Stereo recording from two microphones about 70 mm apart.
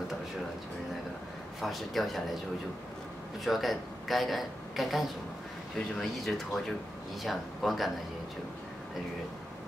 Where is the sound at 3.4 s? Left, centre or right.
Centre.